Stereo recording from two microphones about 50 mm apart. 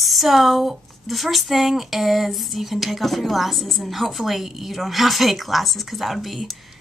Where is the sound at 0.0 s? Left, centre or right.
Centre.